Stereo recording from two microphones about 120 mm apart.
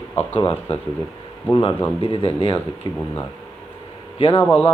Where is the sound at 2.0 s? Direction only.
50° left (ahead or behind).